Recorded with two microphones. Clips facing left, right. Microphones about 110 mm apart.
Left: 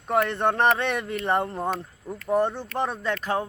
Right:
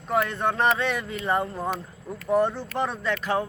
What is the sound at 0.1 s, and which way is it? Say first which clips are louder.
Speech: left 2 dB; 55° left (ahead or behind).